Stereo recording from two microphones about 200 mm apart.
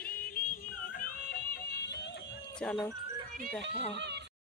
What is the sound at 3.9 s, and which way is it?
Speech, 60° right (ahead or behind).